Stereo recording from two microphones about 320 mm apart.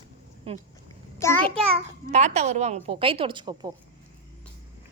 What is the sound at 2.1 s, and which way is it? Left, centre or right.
A woman's voice, right.